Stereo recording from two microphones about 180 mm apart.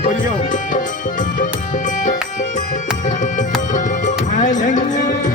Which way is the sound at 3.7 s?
45° left (ahead or behind).